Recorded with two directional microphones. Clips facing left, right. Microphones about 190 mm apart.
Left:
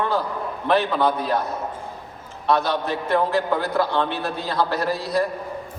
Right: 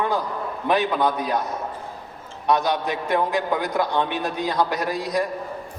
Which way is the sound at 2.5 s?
15° right (ahead or behind).